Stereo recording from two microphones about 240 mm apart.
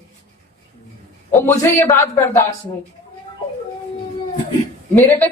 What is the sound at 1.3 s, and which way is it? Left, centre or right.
Speech, centre.